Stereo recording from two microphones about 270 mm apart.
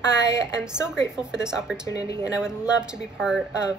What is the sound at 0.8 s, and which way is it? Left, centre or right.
Speech, centre.